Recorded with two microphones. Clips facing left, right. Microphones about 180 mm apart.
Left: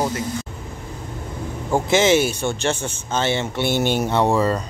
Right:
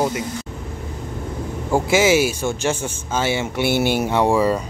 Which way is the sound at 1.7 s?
10° right (ahead or behind).